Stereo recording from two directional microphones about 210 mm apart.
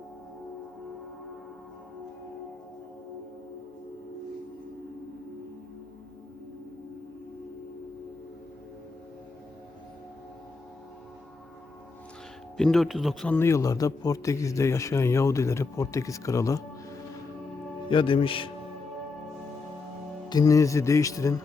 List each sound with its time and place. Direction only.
12.5 s a man's voice: centre (ahead or behind)
17.8 s a man's voice: 25° left (ahead or behind)
20.3 s a man's voice: 15° left (ahead or behind)